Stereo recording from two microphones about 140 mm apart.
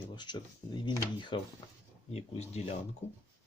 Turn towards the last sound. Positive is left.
turn(degrees=50)  # may be behind; listen again after turning